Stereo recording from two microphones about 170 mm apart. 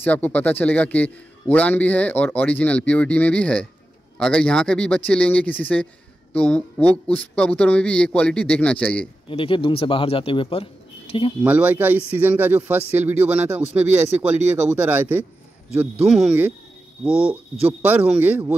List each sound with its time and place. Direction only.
0.0 s a man's voice: 10° left (ahead or behind)
7.1 s a man's voice: 5° left (ahead or behind)
9.3 s a man's voice: 30° left (ahead or behind)
11.4 s speech: 10° right (ahead or behind)